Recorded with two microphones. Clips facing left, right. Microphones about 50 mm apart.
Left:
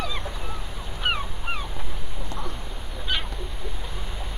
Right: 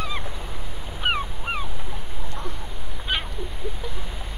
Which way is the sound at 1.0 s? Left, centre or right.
Centre.